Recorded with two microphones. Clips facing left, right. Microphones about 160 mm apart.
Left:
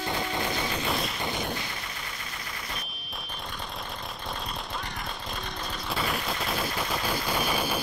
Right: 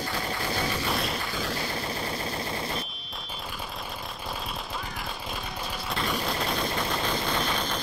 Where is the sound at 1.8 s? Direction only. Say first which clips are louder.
Right 9 dB; 35° right (ahead or behind).